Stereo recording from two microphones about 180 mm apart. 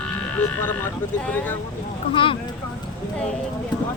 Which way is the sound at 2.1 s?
30° left (ahead or behind).